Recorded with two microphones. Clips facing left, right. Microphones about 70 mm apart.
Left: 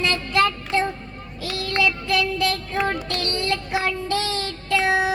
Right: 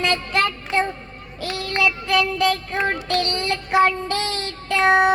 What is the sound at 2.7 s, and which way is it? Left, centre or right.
Child singing, right.